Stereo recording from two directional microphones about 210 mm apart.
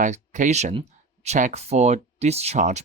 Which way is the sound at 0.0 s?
35° right (ahead or behind).